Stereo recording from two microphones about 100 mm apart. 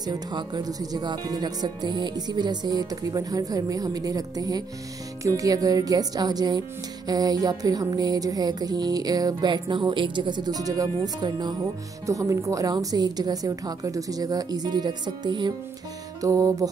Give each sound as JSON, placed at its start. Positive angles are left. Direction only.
{"t": 0.0, "sound": "music", "side_deg": -45}
{"t": 16.2, "sound": "music", "side_deg": -35}